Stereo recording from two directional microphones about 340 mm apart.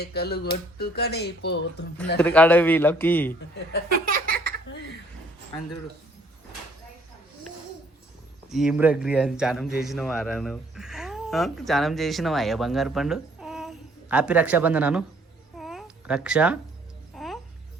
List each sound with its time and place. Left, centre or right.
0.0 s speech: left
2.1 s a man's voice: centre
4.0 s a sound: right
8.4 s a man's voice: centre
15.5 s babbling: centre
17.2 s a sound: centre